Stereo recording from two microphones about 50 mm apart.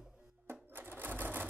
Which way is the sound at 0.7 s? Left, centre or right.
Right.